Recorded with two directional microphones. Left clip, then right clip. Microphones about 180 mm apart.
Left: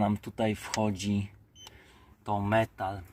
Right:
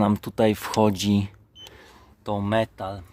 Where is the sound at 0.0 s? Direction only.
45° right (ahead or behind).